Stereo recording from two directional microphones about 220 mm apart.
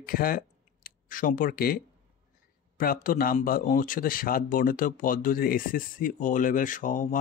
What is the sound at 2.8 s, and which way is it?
Speech, 40° left (ahead or behind).